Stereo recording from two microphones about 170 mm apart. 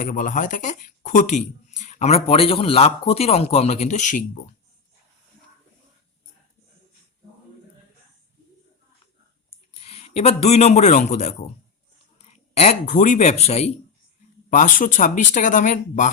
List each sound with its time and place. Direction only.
0.0 s speech: 50° left (ahead or behind)
9.8 s a man's voice: 35° left (ahead or behind)
14.5 s speech: 50° left (ahead or behind)